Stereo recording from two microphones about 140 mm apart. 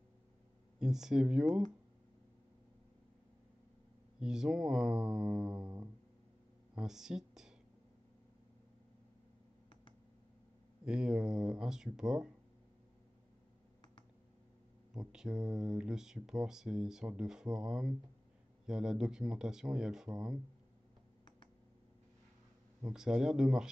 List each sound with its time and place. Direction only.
0.7 s speech: 5° right (ahead or behind)
4.2 s speech: 5° right (ahead or behind)
5.6 s music: 25° right (ahead or behind)
6.7 s speech: 5° right (ahead or behind)
10.9 s speech: 5° right (ahead or behind)
15.0 s speech: 5° right (ahead or behind)
22.8 s speech: 5° right (ahead or behind)